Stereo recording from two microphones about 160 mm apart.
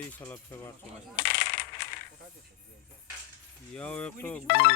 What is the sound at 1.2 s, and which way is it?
Coin, 90° left.